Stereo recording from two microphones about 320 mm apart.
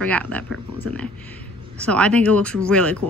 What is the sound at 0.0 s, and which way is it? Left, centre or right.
Speech, centre.